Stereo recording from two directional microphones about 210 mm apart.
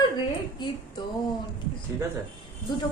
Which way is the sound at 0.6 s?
20° left (ahead or behind).